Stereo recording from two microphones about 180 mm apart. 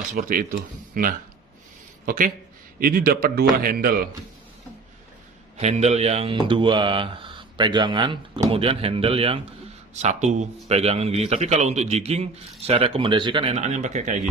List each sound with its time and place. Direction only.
0.1 s a man's voice: 50° right (ahead or behind)
5.6 s a man's voice: 40° right (ahead or behind)